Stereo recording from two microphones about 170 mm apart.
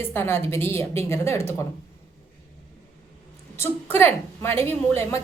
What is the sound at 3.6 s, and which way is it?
A woman's voice, 15° left (ahead or behind).